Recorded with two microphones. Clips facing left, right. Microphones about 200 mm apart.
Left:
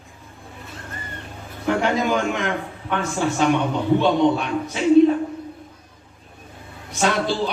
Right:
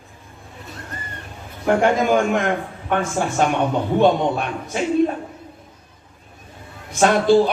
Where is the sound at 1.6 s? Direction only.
50° right (ahead or behind).